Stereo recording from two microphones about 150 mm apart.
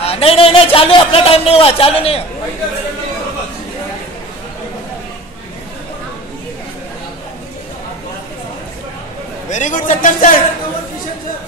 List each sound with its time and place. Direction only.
0.0 s a man's voice: 40° left (ahead or behind)
9.5 s speech: 55° left (ahead or behind)